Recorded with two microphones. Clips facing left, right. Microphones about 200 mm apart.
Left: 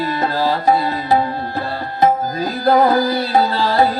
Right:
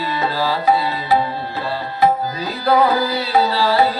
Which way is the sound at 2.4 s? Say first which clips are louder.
Left 2 dB; 50° left (ahead or behind).